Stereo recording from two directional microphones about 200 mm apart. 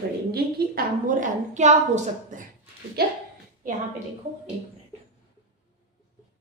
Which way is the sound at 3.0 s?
50° right (ahead or behind).